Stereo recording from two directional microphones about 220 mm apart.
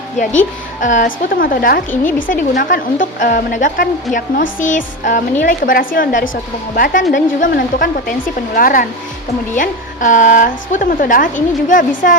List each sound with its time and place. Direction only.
0.2 s a woman's voice: 35° left (ahead or behind)